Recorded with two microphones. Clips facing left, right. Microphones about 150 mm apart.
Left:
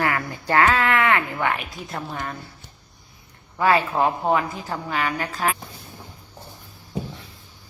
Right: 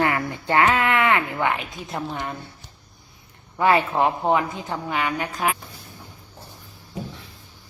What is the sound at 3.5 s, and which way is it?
Speech, 20° right (ahead or behind).